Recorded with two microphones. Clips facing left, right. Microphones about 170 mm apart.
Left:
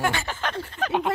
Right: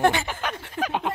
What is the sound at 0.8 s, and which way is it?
Speech, centre (ahead or behind).